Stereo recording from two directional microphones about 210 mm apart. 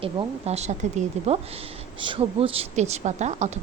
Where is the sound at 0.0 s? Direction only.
30° right (ahead or behind).